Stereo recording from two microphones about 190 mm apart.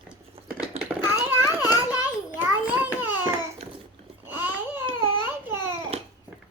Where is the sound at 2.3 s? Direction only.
10° right (ahead or behind).